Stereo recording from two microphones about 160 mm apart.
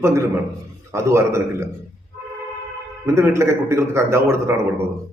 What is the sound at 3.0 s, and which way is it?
A man's voice, 15° right (ahead or behind).